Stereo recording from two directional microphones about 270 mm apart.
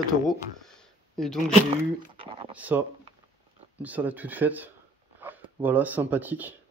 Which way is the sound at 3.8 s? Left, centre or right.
Centre.